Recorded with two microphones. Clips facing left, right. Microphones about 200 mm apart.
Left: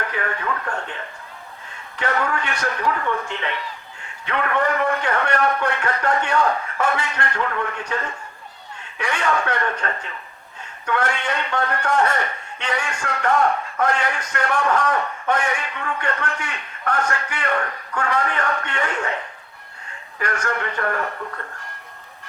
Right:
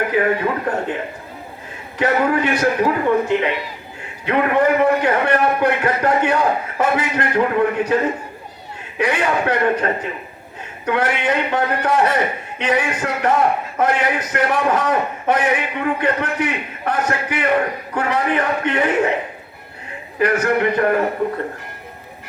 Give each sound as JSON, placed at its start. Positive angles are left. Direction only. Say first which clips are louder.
{"t": 0.0, "sound": "a sound", "louder": "right 10 dB", "side_deg": -15}
{"t": 0.4, "sound": "speech", "louder": "right 7 dB", "side_deg": -30}
{"t": 2.0, "sound": "a man's voice", "louder": "right 7 dB", "side_deg": -20}